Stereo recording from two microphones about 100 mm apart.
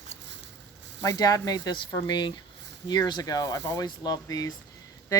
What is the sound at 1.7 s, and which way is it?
Speech, 50° left (ahead or behind).